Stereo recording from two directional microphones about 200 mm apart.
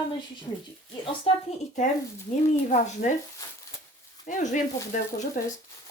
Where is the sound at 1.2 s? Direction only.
35° left (ahead or behind).